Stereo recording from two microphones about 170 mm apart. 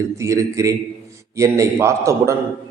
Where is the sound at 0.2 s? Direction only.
15° right (ahead or behind).